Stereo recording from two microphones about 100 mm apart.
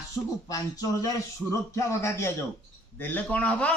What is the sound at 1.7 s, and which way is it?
Speech, 30° left (ahead or behind).